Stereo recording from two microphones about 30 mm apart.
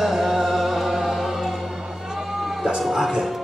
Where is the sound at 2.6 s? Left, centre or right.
Centre.